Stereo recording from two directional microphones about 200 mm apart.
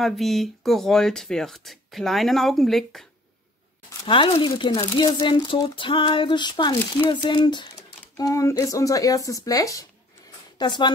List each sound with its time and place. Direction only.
0.0 s speech: centre (ahead or behind)
4.0 s speech: 25° left (ahead or behind)